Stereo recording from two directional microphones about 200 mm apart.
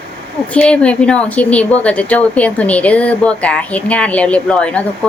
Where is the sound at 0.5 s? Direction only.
5° left (ahead or behind).